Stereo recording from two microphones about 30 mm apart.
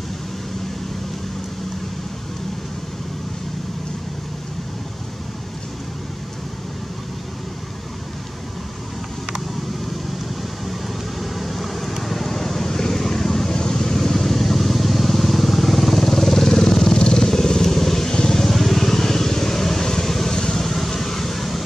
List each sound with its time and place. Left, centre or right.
10.7 s vehicle: centre
18.1 s vehicle: left
18.4 s vehicle: centre